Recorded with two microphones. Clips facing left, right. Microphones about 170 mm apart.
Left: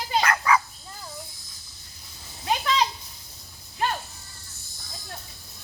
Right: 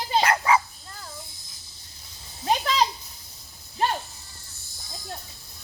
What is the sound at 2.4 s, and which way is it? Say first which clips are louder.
Children playing: right 1 dB; 35° right (ahead or behind).